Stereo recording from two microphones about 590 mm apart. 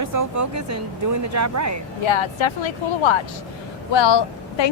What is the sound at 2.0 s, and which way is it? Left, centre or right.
A woman's voice, left.